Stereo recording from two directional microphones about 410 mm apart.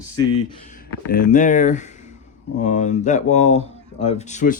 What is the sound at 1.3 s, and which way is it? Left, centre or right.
Speech, centre.